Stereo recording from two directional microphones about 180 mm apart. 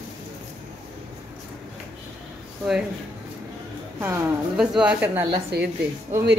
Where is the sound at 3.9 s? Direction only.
10° right (ahead or behind).